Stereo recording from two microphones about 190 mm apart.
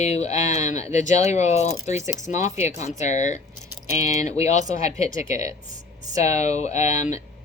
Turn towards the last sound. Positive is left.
turn(degrees=35)  # may be behind; listen again after turning